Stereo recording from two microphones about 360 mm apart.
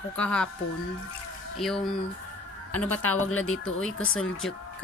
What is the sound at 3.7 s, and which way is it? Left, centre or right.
Speech, centre.